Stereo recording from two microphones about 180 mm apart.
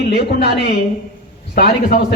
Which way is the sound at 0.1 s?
65° left (ahead or behind).